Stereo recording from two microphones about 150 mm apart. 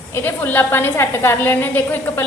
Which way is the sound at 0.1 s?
15° left (ahead or behind).